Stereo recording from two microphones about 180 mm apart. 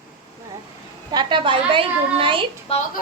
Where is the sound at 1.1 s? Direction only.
25° right (ahead or behind).